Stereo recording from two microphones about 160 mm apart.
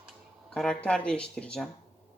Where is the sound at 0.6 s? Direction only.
5° left (ahead or behind).